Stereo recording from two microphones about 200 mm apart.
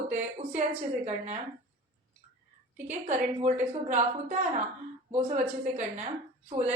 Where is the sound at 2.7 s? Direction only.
35° right (ahead or behind).